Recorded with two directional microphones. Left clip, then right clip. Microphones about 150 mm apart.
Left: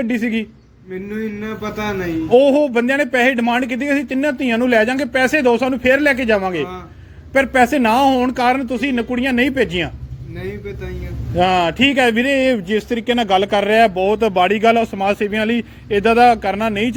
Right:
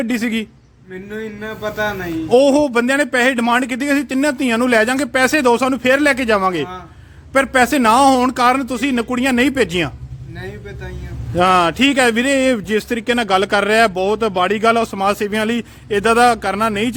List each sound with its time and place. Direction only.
0.0 s a man's voice: 45° right (ahead or behind)
1.1 s speech: 15° right (ahead or behind)
2.3 s speech: 35° right (ahead or behind)
11.3 s speech: 40° right (ahead or behind)
14.2 s speech: 25° right (ahead or behind)